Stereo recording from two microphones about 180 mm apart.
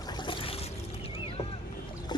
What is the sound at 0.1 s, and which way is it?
Boat, 25° left (ahead or behind).